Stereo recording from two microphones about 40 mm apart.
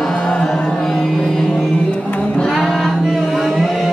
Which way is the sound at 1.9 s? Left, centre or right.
Left.